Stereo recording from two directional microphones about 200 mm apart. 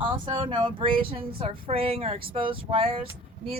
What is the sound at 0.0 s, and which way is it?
A woman's voice, 25° right (ahead or behind).